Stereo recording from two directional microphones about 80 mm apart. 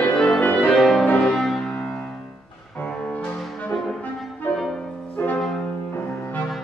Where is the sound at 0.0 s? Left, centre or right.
Centre.